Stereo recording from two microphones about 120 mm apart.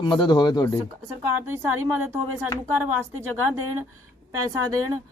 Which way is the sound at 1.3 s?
20° right (ahead or behind).